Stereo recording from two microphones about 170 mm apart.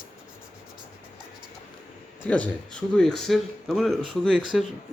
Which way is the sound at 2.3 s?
5° left (ahead or behind).